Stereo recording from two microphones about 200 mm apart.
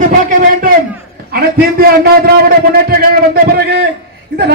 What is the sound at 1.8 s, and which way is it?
A man's voice, 50° right (ahead or behind).